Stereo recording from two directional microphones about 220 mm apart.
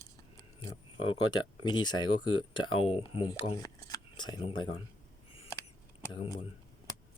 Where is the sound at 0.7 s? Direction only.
20° left (ahead or behind).